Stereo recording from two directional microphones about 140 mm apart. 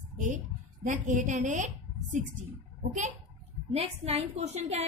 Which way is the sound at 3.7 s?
45° right (ahead or behind).